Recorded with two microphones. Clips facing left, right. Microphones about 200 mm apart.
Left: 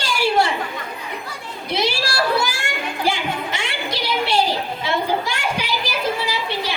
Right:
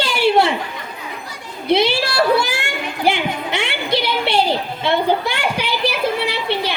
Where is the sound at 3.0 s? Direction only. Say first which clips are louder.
Right 4 dB; 60° right (ahead or behind).